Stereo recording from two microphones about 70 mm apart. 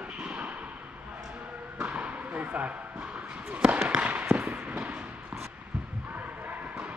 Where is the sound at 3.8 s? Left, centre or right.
Right.